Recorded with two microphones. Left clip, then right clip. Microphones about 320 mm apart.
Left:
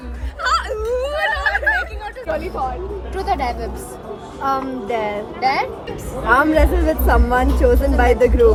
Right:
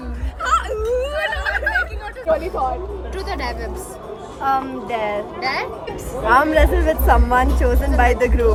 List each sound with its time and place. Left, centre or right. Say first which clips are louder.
0.4 s whimper: even; centre
0.9 s a sound: left 3 dB; centre
2.3 s hubbub: right 4 dB; centre
3.2 s a woman's voice: left 6 dB; centre
6.2 s a woman's voice: even; centre